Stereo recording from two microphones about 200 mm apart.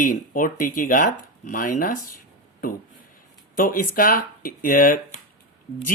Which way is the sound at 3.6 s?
45° left (ahead or behind).